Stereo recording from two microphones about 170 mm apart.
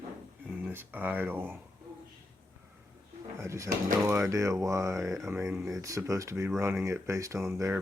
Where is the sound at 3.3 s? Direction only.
15° right (ahead or behind).